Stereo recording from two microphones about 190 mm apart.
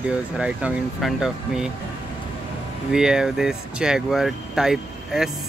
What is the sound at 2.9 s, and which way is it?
Speech, 5° right (ahead or behind).